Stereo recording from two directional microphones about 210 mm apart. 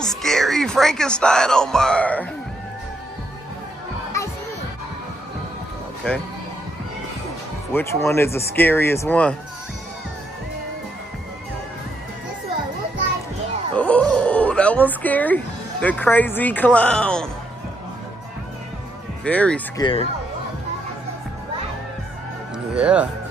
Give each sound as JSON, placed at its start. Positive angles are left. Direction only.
{"t": 0.2, "sound": "speech", "side_deg": 0}
{"t": 7.7, "sound": "speech", "side_deg": 10}
{"t": 13.7, "sound": "a sound", "side_deg": 5}
{"t": 19.2, "sound": "speech", "side_deg": 5}
{"t": 19.8, "sound": "speech", "side_deg": 25}
{"t": 22.8, "sound": "speech", "side_deg": -5}